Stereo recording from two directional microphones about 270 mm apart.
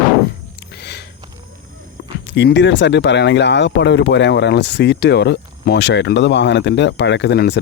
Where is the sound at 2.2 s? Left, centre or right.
Left.